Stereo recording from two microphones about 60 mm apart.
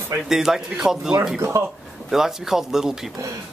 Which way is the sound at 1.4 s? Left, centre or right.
Right.